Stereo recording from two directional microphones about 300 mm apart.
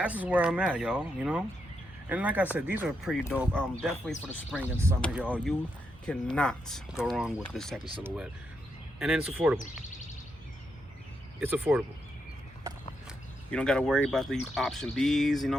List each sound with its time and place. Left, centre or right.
0.0 s speech: centre
4.9 s speech: centre
9.0 s speech: centre
9.6 s speech: left
11.3 s speech: centre
13.5 s speech: centre